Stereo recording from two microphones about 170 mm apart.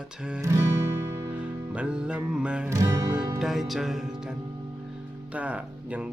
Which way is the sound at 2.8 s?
20° right (ahead or behind).